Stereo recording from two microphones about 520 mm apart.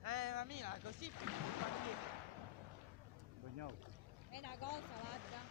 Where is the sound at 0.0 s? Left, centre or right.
Right.